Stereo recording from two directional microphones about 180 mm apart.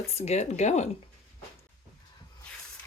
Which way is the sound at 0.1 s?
35° left (ahead or behind).